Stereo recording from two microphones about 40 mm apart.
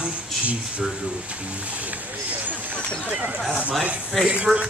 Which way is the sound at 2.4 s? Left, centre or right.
Right.